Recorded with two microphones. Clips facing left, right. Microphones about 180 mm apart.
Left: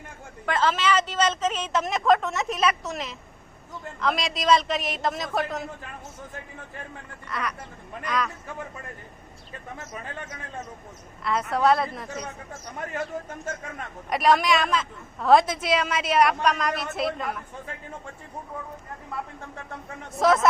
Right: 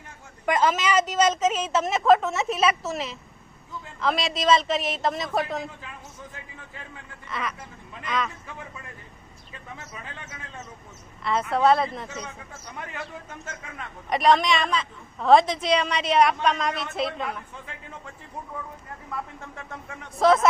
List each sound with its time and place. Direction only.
0.4 s a woman's voice: 15° right (ahead or behind)
5.8 s speech: 50° left (ahead or behind)
7.3 s a woman's voice: centre (ahead or behind)
8.4 s a man's voice: 45° left (ahead or behind)
11.2 s a woman's voice: centre (ahead or behind)
12.0 s a man's voice: 35° left (ahead or behind)
14.1 s a woman's voice: centre (ahead or behind)
20.1 s a woman's voice: centre (ahead or behind)